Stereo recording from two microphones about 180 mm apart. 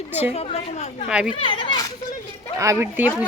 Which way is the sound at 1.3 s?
30° left (ahead or behind).